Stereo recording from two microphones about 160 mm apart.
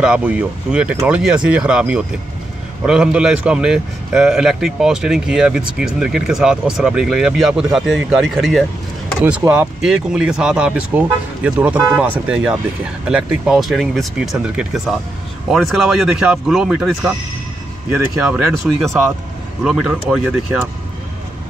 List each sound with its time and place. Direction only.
0.0 s a man's voice: 5° right (ahead or behind)
9.4 s speech: 20° right (ahead or behind)
9.8 s a man's voice: 5° right (ahead or behind)
17.9 s speech: 15° right (ahead or behind)
18.7 s a man's voice: centre (ahead or behind)